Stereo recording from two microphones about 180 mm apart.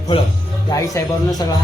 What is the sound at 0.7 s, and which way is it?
Speech, 20° left (ahead or behind).